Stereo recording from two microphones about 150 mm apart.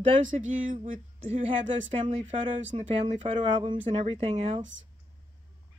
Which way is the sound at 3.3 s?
35° right (ahead or behind).